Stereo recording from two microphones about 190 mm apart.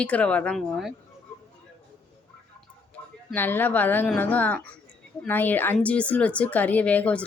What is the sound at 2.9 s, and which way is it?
A woman's voice, 10° left (ahead or behind).